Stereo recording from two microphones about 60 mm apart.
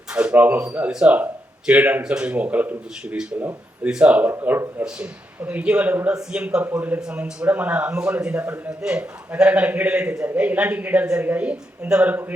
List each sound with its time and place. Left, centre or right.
0.1 s speech: centre
0.9 s speech: centre
1.6 s speech: right
6.7 s speech: right
8.8 s speech: centre